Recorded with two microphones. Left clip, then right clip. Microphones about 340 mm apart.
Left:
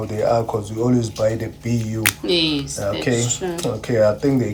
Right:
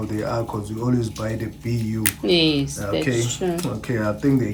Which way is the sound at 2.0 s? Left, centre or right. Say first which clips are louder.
Even; centre.